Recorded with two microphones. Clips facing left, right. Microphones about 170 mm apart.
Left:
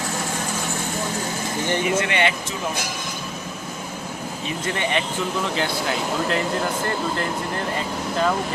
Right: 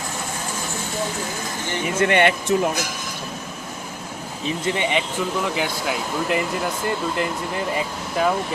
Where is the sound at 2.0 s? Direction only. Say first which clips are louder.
Right 4 dB; 50° right (ahead or behind).